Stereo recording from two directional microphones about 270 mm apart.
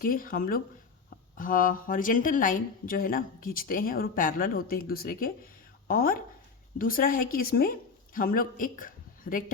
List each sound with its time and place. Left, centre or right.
0.0 s a woman's voice: left